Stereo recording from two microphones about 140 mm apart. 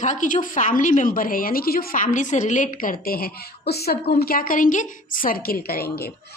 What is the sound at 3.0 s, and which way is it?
A woman's voice, 90° left.